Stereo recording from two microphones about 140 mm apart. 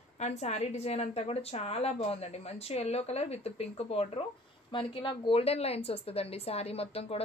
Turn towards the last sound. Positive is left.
turn(degrees=45)  # may be behind; listen again after turning